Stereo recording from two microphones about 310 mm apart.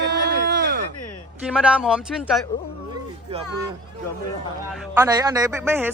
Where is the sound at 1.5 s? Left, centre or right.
Centre.